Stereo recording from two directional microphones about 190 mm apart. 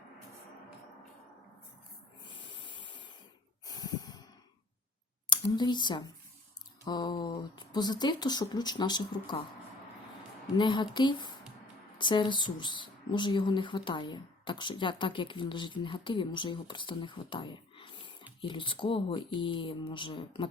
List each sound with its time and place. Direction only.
2.2 s hiss: 25° left (ahead or behind)
3.7 s snort: 20° left (ahead or behind)
5.3 s speech: 20° left (ahead or behind)
10.6 s speech: 25° left (ahead or behind)